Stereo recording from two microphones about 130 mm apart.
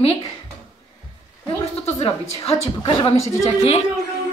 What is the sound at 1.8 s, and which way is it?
A woman's voice, 50° left (ahead or behind).